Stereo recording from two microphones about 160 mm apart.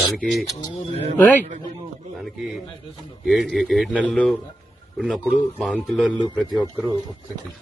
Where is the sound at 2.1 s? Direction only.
Centre (ahead or behind).